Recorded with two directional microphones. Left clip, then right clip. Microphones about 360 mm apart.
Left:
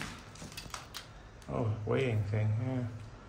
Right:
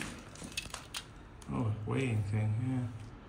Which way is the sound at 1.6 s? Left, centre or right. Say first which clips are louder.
Left 4 dB; left.